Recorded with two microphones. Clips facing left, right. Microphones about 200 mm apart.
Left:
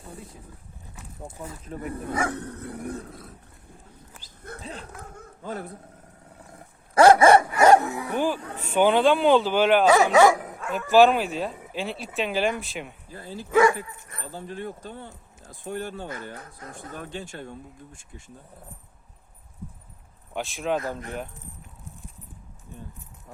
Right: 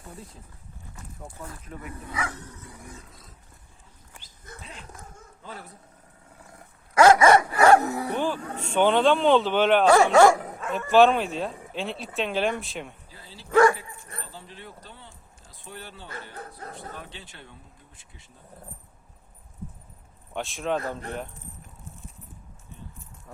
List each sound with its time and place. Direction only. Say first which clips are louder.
1.6 s speech: left 6 dB; 35° left (ahead or behind)
2.0 s dog: left 6 dB; 50° left (ahead or behind)
4.6 s speech: left 7 dB; 35° left (ahead or behind)
4.9 s a sound: left 5 dB; 60° left (ahead or behind)
6.9 s dog: left 2 dB; 30° left (ahead or behind)
7.8 s dog: right 2 dB; 40° right (ahead or behind)
8.1 s speech: left 2 dB; 10° left (ahead or behind)
13.1 s speech: left 10 dB; 50° left (ahead or behind)
13.5 s speech: even; 5° left (ahead or behind)
14.2 s speech: left 10 dB; 50° left (ahead or behind)
16.4 s speech: right 3 dB; 35° right (ahead or behind)
16.9 s speech: left 7 dB; 45° left (ahead or behind)
20.3 s speech: left 1 dB; centre (ahead or behind)